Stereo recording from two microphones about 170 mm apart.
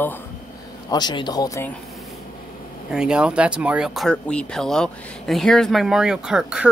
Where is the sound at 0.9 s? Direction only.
25° left (ahead or behind).